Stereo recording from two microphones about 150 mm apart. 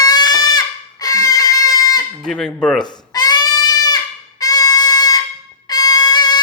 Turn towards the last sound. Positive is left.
turn(degrees=25)  # may be behind; listen again after turning